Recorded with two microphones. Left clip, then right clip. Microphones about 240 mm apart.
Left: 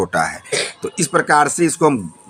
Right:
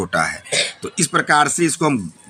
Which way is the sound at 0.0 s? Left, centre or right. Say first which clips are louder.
Left 1 dB; centre.